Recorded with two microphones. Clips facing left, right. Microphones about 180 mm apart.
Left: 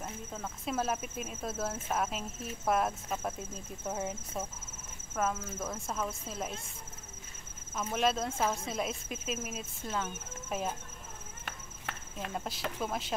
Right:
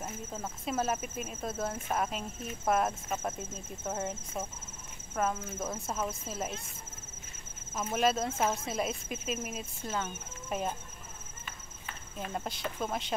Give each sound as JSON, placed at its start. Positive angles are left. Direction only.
{"t": 0.0, "sound": "speech", "side_deg": -5}
{"t": 7.7, "sound": "speech", "side_deg": -5}
{"t": 11.4, "sound": "walk", "side_deg": 70}
{"t": 12.3, "sound": "speech", "side_deg": 0}